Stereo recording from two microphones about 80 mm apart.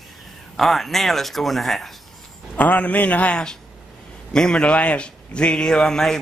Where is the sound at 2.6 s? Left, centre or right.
Centre.